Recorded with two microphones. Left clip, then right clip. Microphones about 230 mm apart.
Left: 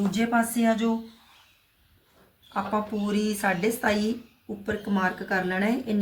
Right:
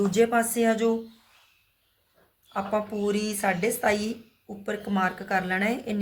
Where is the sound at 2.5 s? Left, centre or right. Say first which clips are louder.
Even; right.